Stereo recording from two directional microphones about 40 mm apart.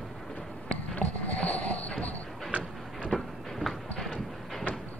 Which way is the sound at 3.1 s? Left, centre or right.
Centre.